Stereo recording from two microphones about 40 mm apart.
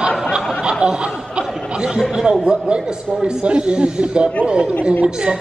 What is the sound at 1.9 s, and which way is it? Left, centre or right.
Speech, centre.